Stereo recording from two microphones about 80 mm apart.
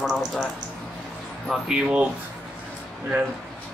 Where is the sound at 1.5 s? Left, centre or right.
Centre.